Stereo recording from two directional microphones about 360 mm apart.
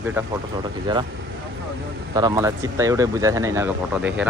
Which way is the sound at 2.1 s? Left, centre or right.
Centre.